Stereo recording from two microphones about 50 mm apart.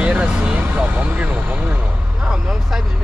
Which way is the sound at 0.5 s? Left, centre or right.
Right.